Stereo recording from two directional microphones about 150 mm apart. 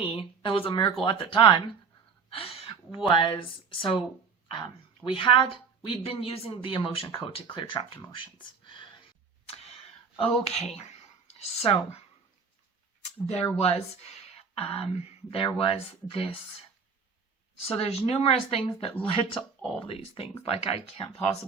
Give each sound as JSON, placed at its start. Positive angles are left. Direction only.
{"t": 0.2, "sound": "speech", "side_deg": 35}
{"t": 8.1, "sound": "a sound", "side_deg": 35}
{"t": 10.2, "sound": "speech", "side_deg": 45}
{"t": 13.0, "sound": "speech", "side_deg": 45}
{"t": 17.6, "sound": "speech", "side_deg": 40}